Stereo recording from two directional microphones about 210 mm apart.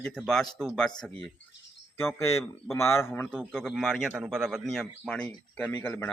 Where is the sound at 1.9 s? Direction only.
10° left (ahead or behind).